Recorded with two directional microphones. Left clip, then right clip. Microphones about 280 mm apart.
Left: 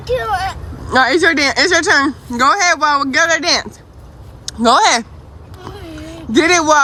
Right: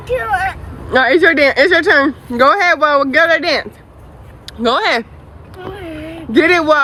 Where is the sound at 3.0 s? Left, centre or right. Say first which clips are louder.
Right 2 dB; centre.